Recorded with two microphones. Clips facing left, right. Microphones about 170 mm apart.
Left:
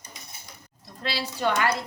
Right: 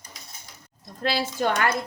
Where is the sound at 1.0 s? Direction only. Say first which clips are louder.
Right 3 dB; 45° right (ahead or behind).